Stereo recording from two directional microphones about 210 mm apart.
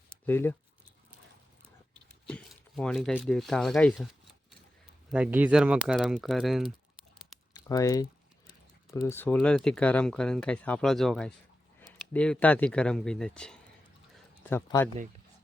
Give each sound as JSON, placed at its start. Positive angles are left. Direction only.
{"t": 0.3, "sound": "speech", "side_deg": 10}
{"t": 2.2, "sound": "speech", "side_deg": 5}
{"t": 3.9, "sound": "a sound", "side_deg": 0}
{"t": 5.1, "sound": "speech", "side_deg": -5}
{"t": 7.5, "sound": "speech", "side_deg": 15}